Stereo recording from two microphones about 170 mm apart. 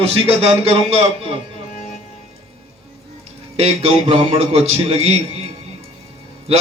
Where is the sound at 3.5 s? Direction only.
35° right (ahead or behind).